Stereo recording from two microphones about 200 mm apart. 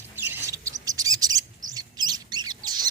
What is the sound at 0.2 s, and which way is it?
Bird, 10° right (ahead or behind).